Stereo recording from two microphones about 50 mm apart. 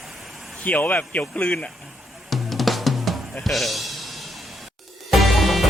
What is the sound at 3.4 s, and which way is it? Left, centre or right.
Speech, centre.